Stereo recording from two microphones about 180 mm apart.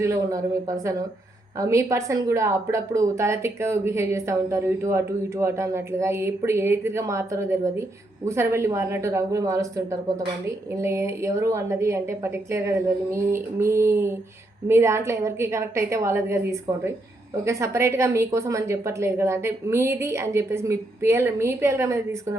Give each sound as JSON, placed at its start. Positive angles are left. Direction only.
{"t": 0.0, "sound": "speech", "side_deg": -15}